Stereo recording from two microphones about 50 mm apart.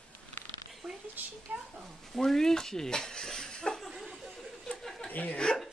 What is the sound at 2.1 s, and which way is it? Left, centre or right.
Speech, centre.